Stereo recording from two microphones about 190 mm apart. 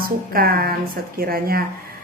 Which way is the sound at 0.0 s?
50° right (ahead or behind).